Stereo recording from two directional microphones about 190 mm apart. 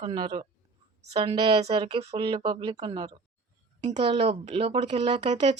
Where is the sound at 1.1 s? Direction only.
25° right (ahead or behind).